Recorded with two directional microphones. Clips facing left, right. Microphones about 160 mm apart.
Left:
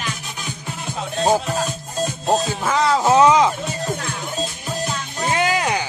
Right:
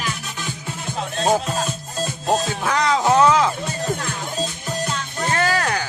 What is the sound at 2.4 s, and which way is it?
Music, centre (ahead or behind).